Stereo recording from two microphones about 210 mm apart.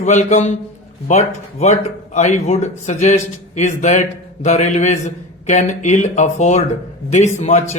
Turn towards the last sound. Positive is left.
turn(degrees=35)  # may be behind; listen again after turning